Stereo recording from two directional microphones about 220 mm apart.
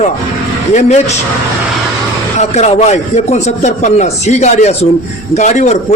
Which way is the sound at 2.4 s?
30° left (ahead or behind).